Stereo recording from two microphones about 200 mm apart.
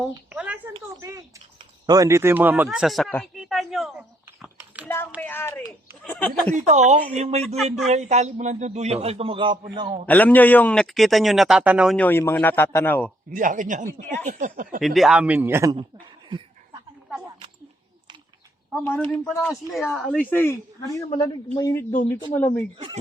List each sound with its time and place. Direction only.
0.3 s a sound: 10° right (ahead or behind)
1.0 s speech: 15° right (ahead or behind); by 3.2 s 5° left (ahead or behind)
3.3 s a sound: centre (ahead or behind)
5.2 s a sound: 10° left (ahead or behind)
6.5 s a man's voice: 35° right (ahead or behind)
7.4 s speech: centre (ahead or behind)
7.9 s a man's voice: 35° right (ahead or behind)
10.1 s speech: 10° left (ahead or behind)
11.9 s a man's voice: 10° left (ahead or behind)
13.3 s a man's voice: 40° right (ahead or behind)
14.8 s speech: centre (ahead or behind)
18.9 s a man's voice: 10° left (ahead or behind)
21.1 s a man's voice: 25° left (ahead or behind)